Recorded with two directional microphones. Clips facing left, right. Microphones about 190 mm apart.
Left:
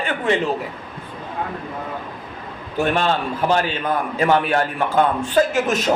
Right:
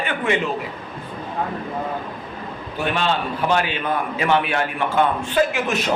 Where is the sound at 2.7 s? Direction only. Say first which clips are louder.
Left 3 dB; 45° left (ahead or behind).